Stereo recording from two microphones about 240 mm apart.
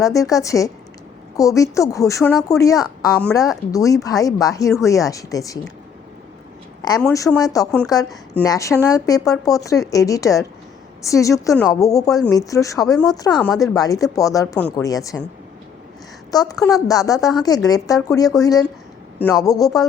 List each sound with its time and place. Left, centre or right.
0.0 s speech: centre
3.2 s a woman's voice: centre
3.7 s speech: centre
7.3 s speech: centre
16.3 s speech: centre